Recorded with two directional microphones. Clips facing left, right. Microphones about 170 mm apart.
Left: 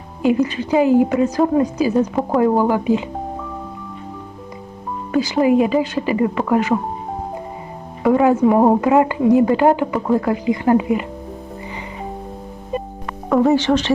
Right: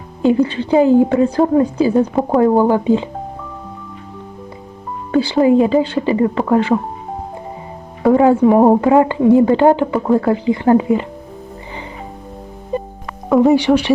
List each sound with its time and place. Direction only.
0.2 s a woman's voice: 30° right (ahead or behind)
5.1 s a woman's voice: 30° right (ahead or behind)
8.0 s a woman's voice: 30° right (ahead or behind)
13.3 s speech: 15° right (ahead or behind)